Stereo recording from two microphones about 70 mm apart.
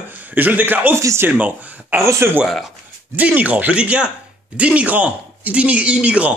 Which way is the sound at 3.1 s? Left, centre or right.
Right.